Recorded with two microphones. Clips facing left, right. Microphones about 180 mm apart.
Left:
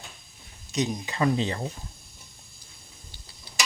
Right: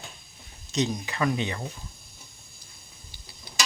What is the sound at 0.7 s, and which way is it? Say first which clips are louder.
Speech: right 1 dB; 10° left (ahead or behind).